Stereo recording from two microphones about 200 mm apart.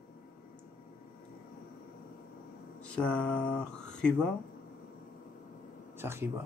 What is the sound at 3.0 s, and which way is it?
Speech, 5° left (ahead or behind).